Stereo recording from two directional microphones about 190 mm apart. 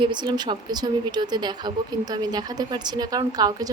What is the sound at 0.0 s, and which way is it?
A woman's voice, 25° right (ahead or behind).